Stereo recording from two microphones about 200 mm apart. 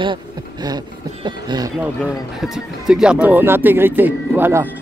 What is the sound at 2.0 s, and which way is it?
Speech, centre (ahead or behind).